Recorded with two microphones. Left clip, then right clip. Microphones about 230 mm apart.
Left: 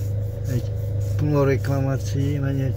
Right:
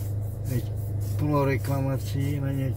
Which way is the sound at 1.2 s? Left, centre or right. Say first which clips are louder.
Left 4 dB; left.